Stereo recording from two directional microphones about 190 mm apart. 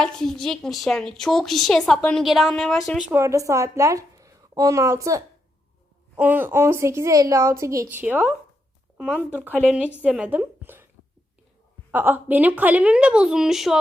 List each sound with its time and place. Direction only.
0.0 s a woman's voice: centre (ahead or behind)
3.1 s a woman's voice: 15° right (ahead or behind)
9.0 s speech: 5° left (ahead or behind)
9.6 s a woman's voice: 5° right (ahead or behind)
11.9 s a woman's voice: 10° right (ahead or behind)